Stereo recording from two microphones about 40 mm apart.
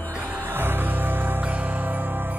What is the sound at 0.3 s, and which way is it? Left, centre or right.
Music, right.